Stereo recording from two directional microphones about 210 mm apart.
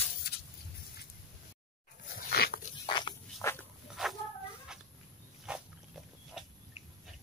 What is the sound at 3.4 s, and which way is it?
Dog, 15° left (ahead or behind).